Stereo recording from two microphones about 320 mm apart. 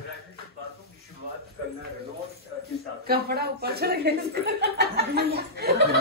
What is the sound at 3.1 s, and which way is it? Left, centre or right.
Speech, right.